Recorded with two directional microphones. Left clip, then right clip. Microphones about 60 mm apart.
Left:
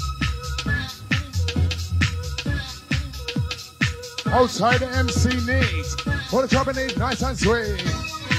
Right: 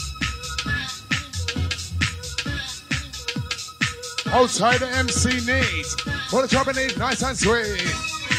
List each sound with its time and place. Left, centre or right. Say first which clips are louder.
0.2 s music: right 4 dB; right
3.3 s speech: left 1 dB; right
6.8 s speech: right 2 dB; right
8.3 s music: right 1 dB; right